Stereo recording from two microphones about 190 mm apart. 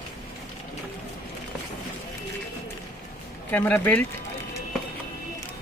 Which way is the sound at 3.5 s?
10° left (ahead or behind).